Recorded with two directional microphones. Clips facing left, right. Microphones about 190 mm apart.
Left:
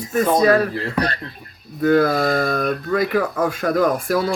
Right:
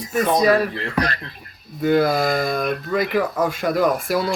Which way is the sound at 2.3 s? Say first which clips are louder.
Left 1 dB; 35° left (ahead or behind).